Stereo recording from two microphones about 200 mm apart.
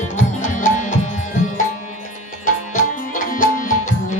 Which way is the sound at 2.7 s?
40° left (ahead or behind).